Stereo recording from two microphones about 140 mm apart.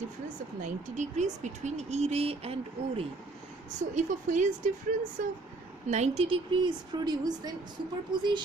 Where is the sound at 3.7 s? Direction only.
60° right (ahead or behind).